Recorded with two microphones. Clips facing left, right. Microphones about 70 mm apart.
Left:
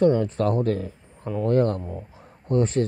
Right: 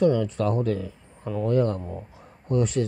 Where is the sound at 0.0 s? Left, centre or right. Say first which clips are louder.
Left 2 dB; left.